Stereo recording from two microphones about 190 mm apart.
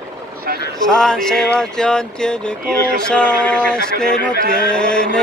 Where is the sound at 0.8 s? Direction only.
5° left (ahead or behind).